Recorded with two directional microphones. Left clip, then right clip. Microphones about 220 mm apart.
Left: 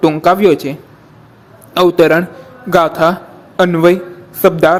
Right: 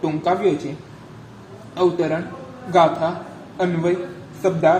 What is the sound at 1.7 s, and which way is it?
A man's voice, 50° left (ahead or behind).